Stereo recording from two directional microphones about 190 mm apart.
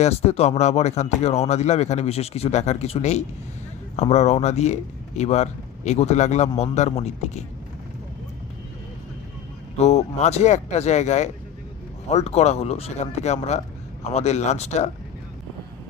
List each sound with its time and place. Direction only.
0.0 s speech: 35° left (ahead or behind)
9.7 s speech: 35° left (ahead or behind)